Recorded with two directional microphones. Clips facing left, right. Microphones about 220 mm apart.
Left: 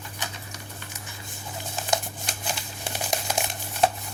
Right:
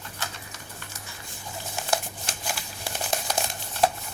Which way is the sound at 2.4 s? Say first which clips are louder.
Left 1 dB; 20° left (ahead or behind).